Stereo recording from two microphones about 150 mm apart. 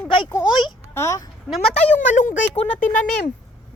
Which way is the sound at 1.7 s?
50° left (ahead or behind).